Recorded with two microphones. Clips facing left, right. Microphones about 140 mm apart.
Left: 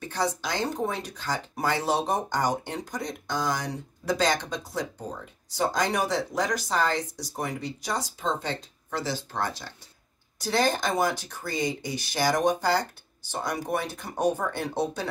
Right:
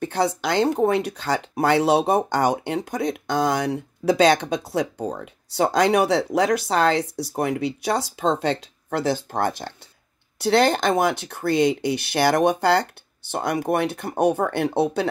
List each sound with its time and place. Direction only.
0.0 s speech: 60° right (ahead or behind)
10.4 s speech: 70° right (ahead or behind)